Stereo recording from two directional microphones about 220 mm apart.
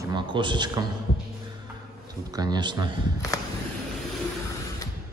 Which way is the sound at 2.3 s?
20° right (ahead or behind).